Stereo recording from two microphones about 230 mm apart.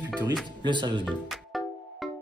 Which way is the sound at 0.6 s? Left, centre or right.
Centre.